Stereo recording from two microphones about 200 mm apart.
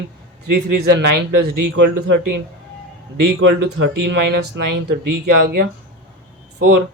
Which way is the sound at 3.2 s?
60° right (ahead or behind).